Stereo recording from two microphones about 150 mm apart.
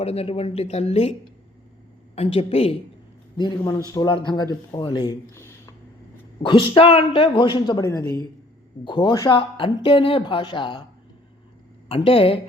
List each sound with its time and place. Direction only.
0.0 s speech: 45° left (ahead or behind)
2.1 s speech: 45° left (ahead or behind)
3.3 s a man's voice: 30° left (ahead or behind)
5.3 s a sound: 20° left (ahead or behind)
6.4 s speech: 35° left (ahead or behind)
7.9 s a man's voice: 20° left (ahead or behind)
8.8 s speech: 35° left (ahead or behind)
11.9 s speech: 35° left (ahead or behind)